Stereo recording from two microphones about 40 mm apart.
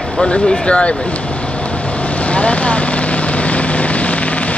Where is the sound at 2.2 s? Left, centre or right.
Left.